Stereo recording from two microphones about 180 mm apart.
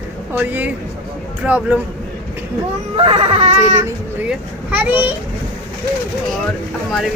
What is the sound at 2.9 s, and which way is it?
Baby cry, 30° right (ahead or behind).